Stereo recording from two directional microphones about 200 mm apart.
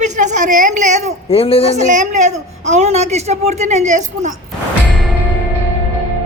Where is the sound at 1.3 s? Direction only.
30° left (ahead or behind).